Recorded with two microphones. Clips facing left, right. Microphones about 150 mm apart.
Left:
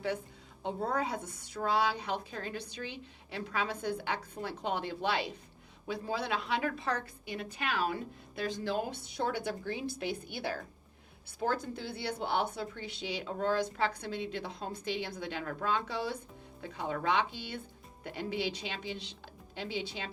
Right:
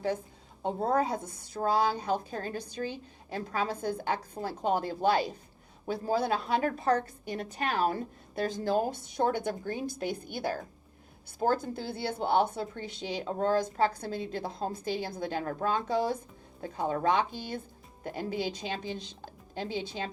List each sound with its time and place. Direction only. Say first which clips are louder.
0.6 s a woman's voice: right 5 dB; 40° right (ahead or behind)